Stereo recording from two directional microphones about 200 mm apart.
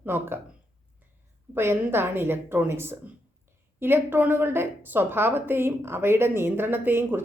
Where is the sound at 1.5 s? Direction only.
10° right (ahead or behind).